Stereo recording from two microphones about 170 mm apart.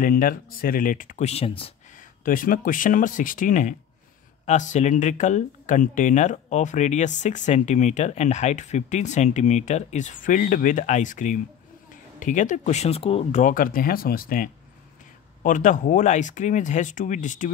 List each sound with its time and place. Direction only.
0.0 s speech: 55° left (ahead or behind); by 1.7 s 35° left (ahead or behind)
2.0 s speech: 55° left (ahead or behind)